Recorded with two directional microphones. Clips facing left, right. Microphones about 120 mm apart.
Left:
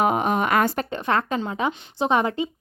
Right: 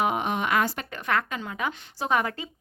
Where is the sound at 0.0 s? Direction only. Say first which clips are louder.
Left 5 dB; 45° left (ahead or behind).